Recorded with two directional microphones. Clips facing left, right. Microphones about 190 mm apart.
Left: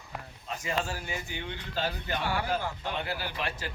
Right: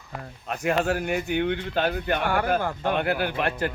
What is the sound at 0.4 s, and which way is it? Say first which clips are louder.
Speech: right 9 dB; 65° right (ahead or behind).